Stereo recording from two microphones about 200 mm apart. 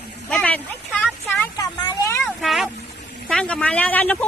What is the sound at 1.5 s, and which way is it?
Vehicle, 20° left (ahead or behind).